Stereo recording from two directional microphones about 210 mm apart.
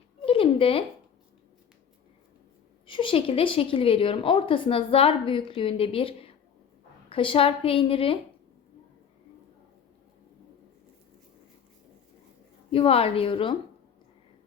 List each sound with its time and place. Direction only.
0.3 s a sound: 25° left (ahead or behind)
2.8 s a woman's voice: 25° left (ahead or behind)
12.7 s a woman's voice: 25° left (ahead or behind)